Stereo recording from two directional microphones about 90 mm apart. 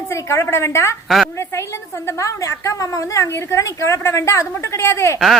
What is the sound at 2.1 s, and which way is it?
A woman's voice, 35° left (ahead or behind).